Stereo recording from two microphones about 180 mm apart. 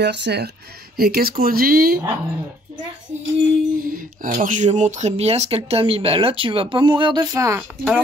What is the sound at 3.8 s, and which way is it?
Speech, 50° right (ahead or behind).